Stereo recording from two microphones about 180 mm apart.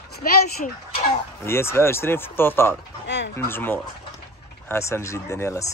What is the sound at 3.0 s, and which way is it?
Fowl, 75° left (ahead or behind).